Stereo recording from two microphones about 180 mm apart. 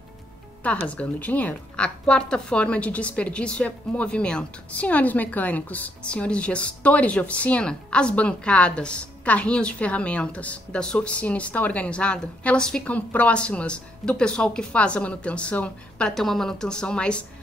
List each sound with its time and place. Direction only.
0.8 s a woman's voice: 10° left (ahead or behind)